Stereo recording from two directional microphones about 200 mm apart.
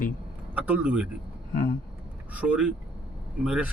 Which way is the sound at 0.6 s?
10° right (ahead or behind).